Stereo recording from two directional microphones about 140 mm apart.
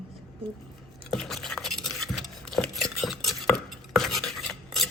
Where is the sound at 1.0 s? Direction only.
Centre (ahead or behind).